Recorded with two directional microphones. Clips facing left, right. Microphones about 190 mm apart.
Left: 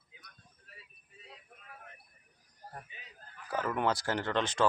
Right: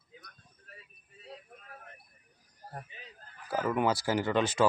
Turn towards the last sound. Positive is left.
turn(degrees=-5)  # may be behind; listen again after turning